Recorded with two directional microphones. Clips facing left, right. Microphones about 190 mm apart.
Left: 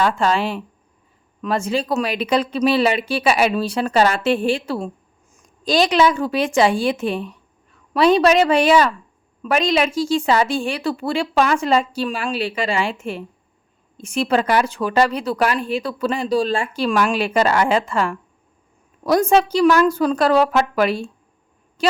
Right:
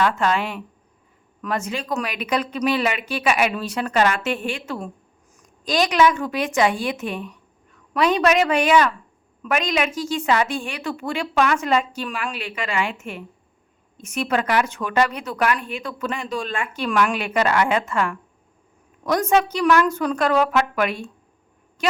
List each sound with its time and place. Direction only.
0.0 s a woman's voice: 30° left (ahead or behind)